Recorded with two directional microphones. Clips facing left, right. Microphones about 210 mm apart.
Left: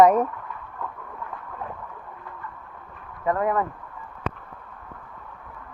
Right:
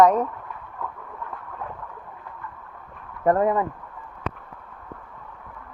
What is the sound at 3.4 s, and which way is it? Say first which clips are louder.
Speech: right 2 dB; 25° right (ahead or behind).